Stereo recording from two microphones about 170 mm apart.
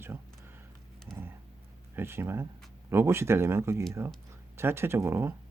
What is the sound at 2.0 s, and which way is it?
Speech, 15° right (ahead or behind).